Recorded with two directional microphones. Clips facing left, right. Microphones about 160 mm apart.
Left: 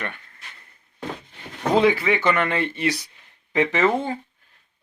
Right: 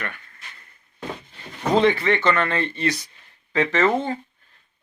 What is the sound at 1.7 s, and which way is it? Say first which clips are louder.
Speech: even; 5° left (ahead or behind).